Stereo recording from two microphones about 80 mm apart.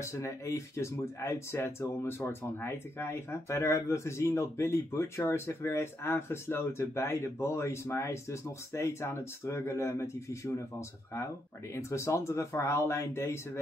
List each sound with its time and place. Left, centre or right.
0.0 s speech: left
11.7 s speech: left